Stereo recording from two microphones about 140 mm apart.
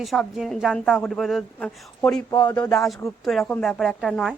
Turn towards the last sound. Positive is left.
turn(degrees=0)  # may be behind; listen again after turning